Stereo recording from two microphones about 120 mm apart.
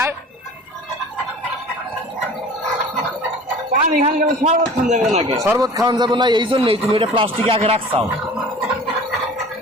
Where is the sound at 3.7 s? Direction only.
75° right (ahead or behind).